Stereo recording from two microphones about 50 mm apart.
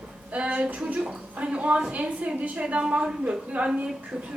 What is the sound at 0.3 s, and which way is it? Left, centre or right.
A woman's voice, right.